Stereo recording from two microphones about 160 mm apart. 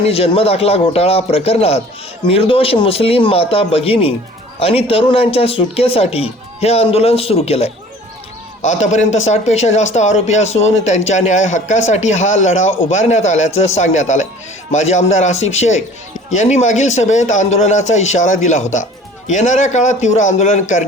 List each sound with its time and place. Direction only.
0.1 s speech: 40° left (ahead or behind)